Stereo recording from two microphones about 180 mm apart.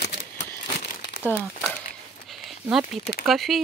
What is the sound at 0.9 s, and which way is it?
Crumpling, 50° left (ahead or behind).